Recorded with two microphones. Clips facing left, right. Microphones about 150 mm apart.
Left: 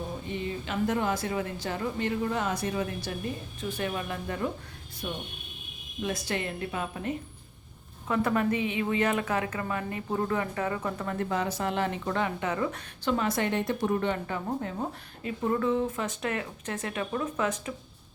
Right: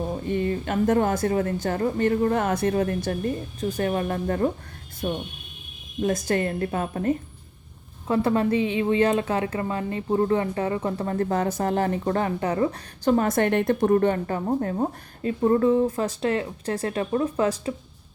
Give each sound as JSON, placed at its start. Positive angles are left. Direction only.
{"t": 0.3, "sound": "speech", "side_deg": -55}
{"t": 8.0, "sound": "a woman's voice", "side_deg": -30}